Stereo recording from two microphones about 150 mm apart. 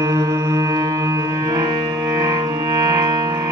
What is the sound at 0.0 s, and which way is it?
Music, 25° right (ahead or behind).